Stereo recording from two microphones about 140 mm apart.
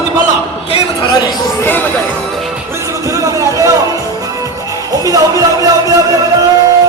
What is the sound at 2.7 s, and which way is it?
Music, 20° right (ahead or behind).